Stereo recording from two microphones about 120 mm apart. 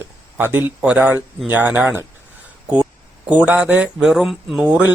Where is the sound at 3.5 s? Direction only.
10° right (ahead or behind).